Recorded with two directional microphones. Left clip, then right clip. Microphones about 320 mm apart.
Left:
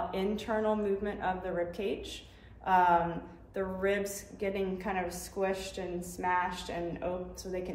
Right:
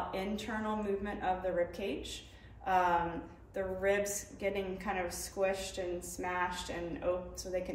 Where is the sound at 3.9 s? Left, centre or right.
Right.